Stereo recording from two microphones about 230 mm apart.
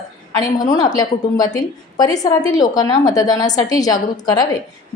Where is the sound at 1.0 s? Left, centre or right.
Centre.